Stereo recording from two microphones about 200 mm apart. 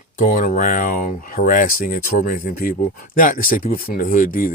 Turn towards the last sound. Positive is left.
turn(degrees=45)  # may be behind; listen again after turning